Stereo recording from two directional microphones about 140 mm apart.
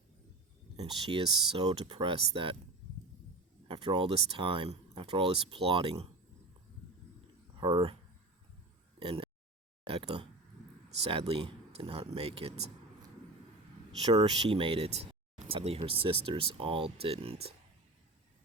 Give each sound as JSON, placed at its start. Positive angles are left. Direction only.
{"t": 0.8, "sound": "speech", "side_deg": -35}
{"t": 3.7, "sound": "speech", "side_deg": -35}
{"t": 7.5, "sound": "speech", "side_deg": -35}
{"t": 9.0, "sound": "a sound", "side_deg": -40}
{"t": 9.8, "sound": "speech", "side_deg": -40}
{"t": 11.3, "sound": "speech", "side_deg": -40}
{"t": 14.1, "sound": "speech", "side_deg": -35}